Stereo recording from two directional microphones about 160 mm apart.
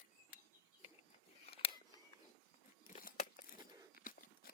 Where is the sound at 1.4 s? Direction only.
35° left (ahead or behind).